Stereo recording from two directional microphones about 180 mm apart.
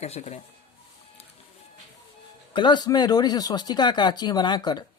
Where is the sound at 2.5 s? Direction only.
25° left (ahead or behind).